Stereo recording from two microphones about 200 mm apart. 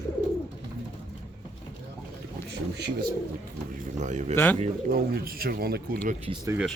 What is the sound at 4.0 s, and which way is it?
Speech, 35° right (ahead or behind).